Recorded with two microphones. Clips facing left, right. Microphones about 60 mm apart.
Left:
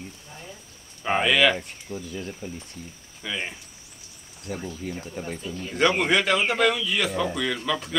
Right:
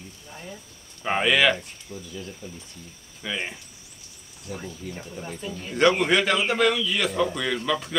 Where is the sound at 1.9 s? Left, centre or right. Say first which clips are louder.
Left 4 dB; left.